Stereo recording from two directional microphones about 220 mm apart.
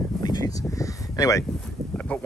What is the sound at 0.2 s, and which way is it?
Speech, 15° left (ahead or behind).